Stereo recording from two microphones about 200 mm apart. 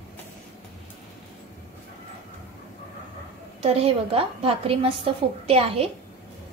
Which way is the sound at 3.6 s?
30° right (ahead or behind).